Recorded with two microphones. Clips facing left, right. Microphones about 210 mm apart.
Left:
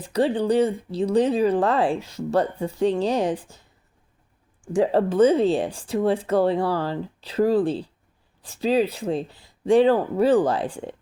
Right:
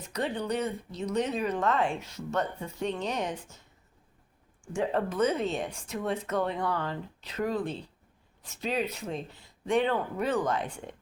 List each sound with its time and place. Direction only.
0.0 s speech: 30° left (ahead or behind)
4.7 s speech: 35° left (ahead or behind)